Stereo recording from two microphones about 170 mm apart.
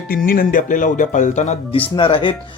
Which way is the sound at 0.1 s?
60° left (ahead or behind).